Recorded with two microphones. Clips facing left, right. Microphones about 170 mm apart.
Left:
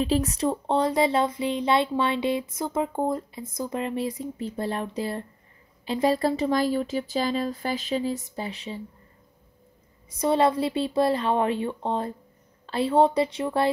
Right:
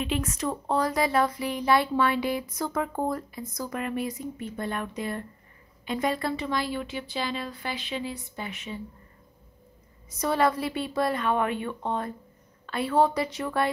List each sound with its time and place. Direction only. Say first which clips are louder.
0.0 s speech: left 5 dB; 35° left (ahead or behind)
10.1 s speech: left 3 dB; 25° left (ahead or behind)